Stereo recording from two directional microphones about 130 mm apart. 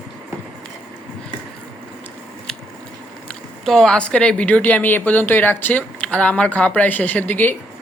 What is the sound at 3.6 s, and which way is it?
Speech, centre (ahead or behind).